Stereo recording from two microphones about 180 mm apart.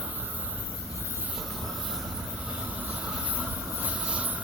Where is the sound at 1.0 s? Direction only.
10° right (ahead or behind).